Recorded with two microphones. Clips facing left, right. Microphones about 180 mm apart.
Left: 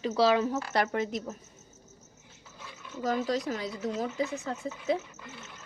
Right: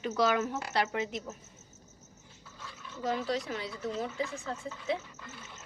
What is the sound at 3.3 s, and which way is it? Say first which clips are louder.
Speech: left 3 dB; 40° left (ahead or behind).